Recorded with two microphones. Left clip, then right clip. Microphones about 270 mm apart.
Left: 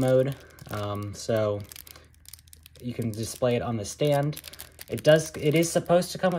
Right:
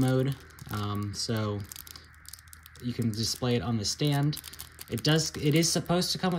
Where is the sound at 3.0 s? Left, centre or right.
Centre.